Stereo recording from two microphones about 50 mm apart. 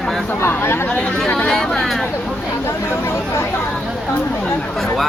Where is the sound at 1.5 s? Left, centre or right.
Centre.